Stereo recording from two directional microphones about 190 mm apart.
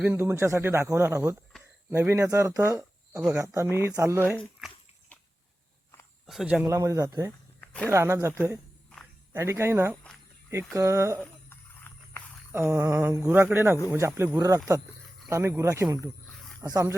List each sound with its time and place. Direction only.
0.0 s speech: 15° right (ahead or behind)
6.2 s speech: centre (ahead or behind)
6.7 s speech: 15° right (ahead or behind)
7.6 s a sound: 5° left (ahead or behind)
7.9 s speech: 15° right (ahead or behind)
9.3 s speech: 15° right (ahead or behind)
11.2 s a sound: 10° left (ahead or behind)
12.5 s speech: 10° right (ahead or behind)